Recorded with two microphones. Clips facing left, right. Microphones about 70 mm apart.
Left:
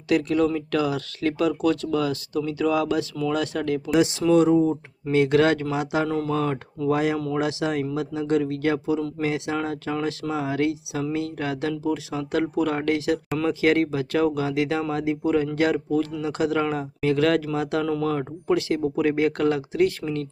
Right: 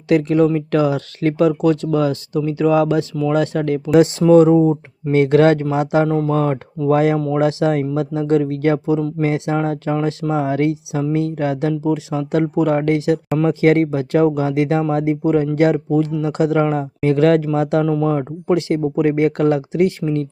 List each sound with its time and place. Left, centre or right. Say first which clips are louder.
0.1 s speech: right 6 dB; right
6.1 s speech: right 7 dB; right
6.3 s speech: right 6 dB; right
7.2 s speech: right 8 dB; right
17.8 s speech: right 6 dB; centre